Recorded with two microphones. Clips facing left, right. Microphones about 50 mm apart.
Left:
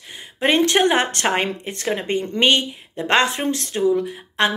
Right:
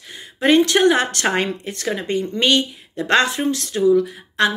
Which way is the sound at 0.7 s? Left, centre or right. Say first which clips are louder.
Right 1 dB; left.